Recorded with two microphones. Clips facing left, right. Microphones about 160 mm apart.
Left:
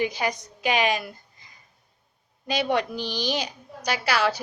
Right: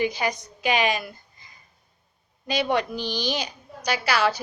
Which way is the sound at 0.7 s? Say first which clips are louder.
Even; 45° right (ahead or behind).